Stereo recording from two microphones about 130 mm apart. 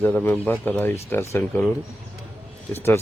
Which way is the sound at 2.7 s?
20° left (ahead or behind).